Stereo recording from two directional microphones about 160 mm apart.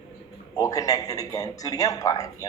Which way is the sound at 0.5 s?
20° left (ahead or behind).